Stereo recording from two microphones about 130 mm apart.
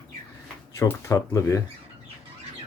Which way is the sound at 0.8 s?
20° left (ahead or behind).